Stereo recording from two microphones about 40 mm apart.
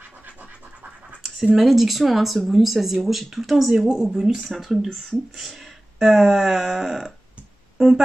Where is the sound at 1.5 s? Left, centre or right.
Centre.